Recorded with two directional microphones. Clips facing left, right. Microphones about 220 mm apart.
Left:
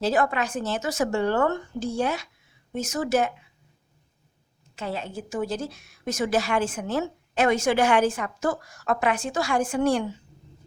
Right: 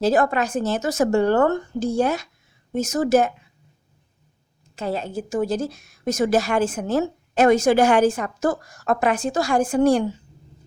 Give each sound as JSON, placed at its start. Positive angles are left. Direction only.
{"t": 0.0, "sound": "a woman's voice", "side_deg": -45}
{"t": 4.7, "sound": "a woman's voice", "side_deg": -40}